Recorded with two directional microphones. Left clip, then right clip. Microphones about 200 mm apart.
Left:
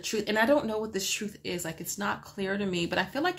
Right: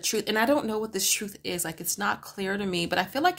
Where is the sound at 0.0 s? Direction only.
40° right (ahead or behind).